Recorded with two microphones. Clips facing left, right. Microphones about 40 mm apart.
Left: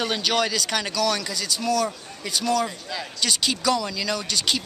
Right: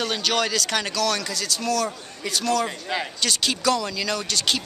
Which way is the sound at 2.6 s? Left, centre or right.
Right.